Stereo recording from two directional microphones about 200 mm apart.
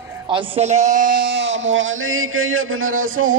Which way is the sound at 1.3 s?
65° right (ahead or behind).